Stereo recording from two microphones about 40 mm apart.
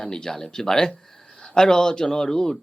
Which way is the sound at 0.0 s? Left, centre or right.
Centre.